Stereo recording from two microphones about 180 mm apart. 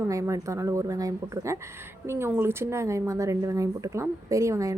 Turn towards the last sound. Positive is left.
turn(degrees=-15)  # may be behind; listen again after turning